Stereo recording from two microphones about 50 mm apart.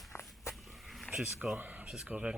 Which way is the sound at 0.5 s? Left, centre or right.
Centre.